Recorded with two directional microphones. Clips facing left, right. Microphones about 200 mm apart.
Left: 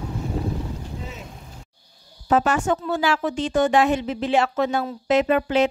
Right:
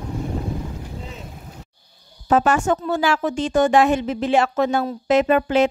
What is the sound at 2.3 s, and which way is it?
A woman's voice, 50° right (ahead or behind).